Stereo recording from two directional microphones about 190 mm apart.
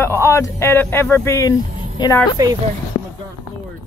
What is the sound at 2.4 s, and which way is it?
Speech, 20° right (ahead or behind).